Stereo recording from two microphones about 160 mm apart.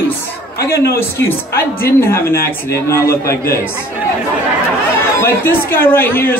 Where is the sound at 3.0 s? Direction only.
75° left (ahead or behind).